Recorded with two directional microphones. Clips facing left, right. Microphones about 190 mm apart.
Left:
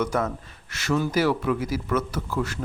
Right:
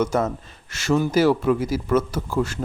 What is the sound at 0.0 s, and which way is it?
Speech, 25° right (ahead or behind).